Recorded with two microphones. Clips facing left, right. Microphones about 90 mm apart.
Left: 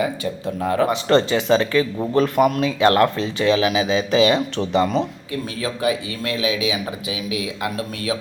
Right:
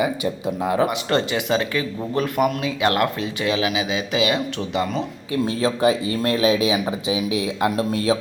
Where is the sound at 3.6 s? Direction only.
35° left (ahead or behind).